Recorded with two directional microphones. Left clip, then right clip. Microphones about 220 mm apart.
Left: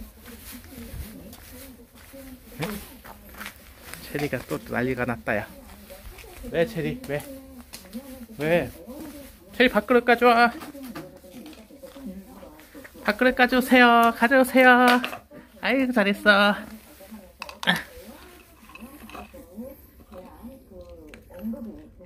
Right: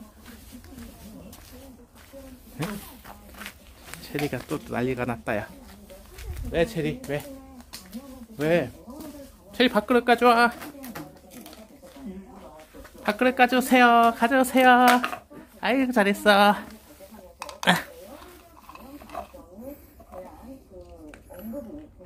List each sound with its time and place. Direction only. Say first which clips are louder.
4.3 s speech: left 2 dB; 5° right (ahead or behind)
6.5 s speech: even; 5° right (ahead or behind)
8.4 s speech: even; 10° right (ahead or behind)
13.0 s speech: even; 10° right (ahead or behind)
17.7 s a sound: right 3 dB; 20° right (ahead or behind)